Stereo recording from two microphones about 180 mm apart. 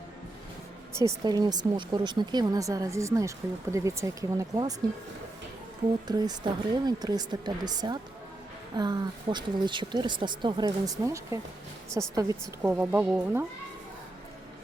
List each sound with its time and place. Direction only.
0.9 s speech: 20° right (ahead or behind)
6.1 s a woman's voice: 20° right (ahead or behind)